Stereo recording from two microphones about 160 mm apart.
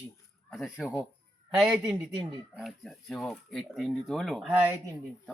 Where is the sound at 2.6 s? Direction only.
Centre (ahead or behind).